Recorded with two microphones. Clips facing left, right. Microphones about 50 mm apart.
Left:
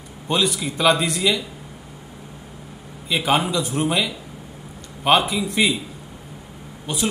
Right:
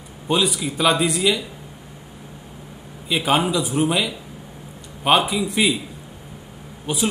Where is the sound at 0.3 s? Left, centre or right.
Centre.